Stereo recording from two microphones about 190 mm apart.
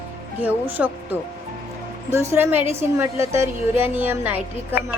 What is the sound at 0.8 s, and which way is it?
Speech, 5° right (ahead or behind).